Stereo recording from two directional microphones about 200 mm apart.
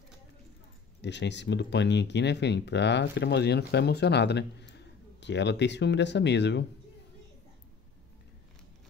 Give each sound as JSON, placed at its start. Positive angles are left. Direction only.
{"t": 1.0, "sound": "speech", "side_deg": 60}